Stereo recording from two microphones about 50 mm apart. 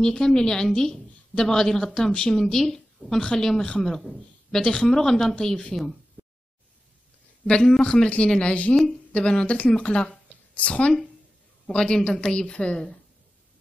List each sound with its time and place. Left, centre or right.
0.0 s a woman's voice: centre
6.2 s a sound: right
7.4 s a woman's voice: centre